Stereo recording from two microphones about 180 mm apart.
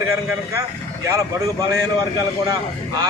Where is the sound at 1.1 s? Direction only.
15° right (ahead or behind).